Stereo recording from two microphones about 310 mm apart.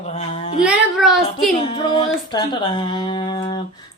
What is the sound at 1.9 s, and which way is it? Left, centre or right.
Speech, centre.